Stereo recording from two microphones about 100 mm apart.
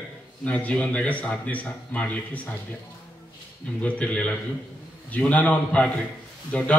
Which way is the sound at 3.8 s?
15° left (ahead or behind).